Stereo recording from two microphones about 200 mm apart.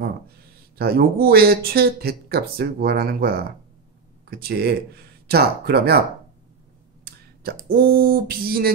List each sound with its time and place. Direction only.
0.7 s speech: 50° right (ahead or behind)
7.6 s speech: 45° right (ahead or behind)